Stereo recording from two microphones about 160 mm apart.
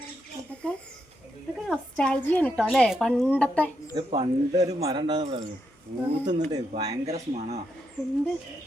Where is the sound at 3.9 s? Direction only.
30° right (ahead or behind).